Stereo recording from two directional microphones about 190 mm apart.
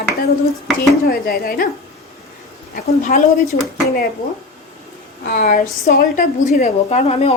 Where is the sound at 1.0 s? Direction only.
50° left (ahead or behind).